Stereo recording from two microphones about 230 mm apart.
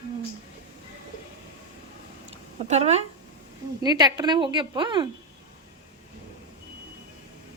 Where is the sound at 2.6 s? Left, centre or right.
Right.